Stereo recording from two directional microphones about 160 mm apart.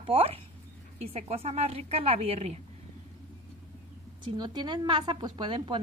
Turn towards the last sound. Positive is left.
turn(degrees=-30)  # may be behind; listen again after turning